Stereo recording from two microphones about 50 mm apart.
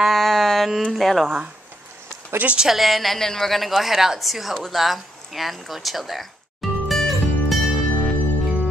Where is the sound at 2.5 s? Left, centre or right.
Centre.